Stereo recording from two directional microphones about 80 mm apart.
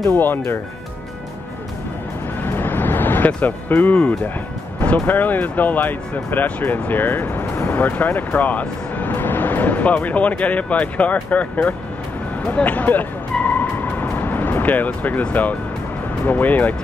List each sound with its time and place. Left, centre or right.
0.1 s speech: left
2.4 s vehicle: left
3.9 s speech: centre
12.4 s music: centre
14.1 s speech: left